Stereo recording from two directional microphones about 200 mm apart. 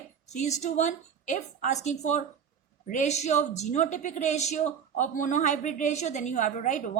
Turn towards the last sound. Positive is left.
turn(degrees=40)  # may be behind; listen again after turning